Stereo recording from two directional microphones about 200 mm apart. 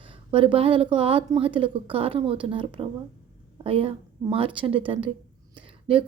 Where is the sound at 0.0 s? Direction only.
25° right (ahead or behind).